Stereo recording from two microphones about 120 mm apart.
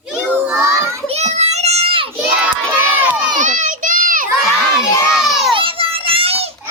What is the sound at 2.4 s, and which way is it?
Crowd, 15° right (ahead or behind).